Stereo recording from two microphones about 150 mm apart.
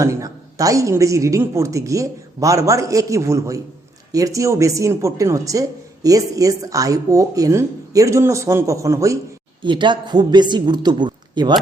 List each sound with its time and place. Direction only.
0.0 s a woman's voice: 20° right (ahead or behind)
9.6 s a woman's voice: 30° right (ahead or behind)